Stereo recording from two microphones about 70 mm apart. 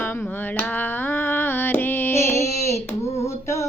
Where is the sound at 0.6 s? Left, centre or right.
Left.